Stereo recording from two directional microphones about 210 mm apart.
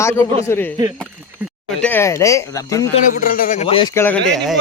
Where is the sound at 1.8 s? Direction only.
10° left (ahead or behind).